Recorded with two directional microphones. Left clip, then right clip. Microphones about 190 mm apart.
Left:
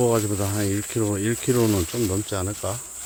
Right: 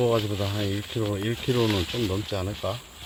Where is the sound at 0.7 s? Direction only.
35° left (ahead or behind).